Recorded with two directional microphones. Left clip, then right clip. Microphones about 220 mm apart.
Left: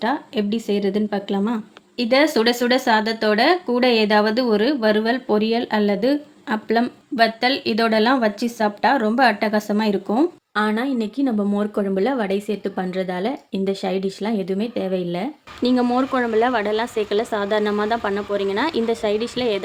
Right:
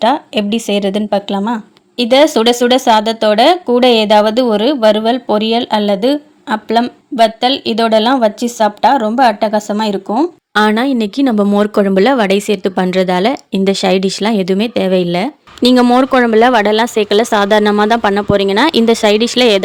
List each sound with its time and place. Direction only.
0.0 s speech: 30° right (ahead or behind); by 10.2 s 10° right (ahead or behind)
10.5 s speech: 45° right (ahead or behind)